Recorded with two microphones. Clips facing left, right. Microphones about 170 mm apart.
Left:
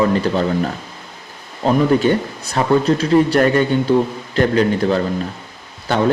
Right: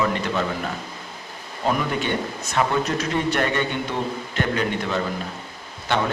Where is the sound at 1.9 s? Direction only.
40° left (ahead or behind).